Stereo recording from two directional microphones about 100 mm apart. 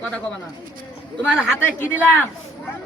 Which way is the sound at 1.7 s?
20° left (ahead or behind).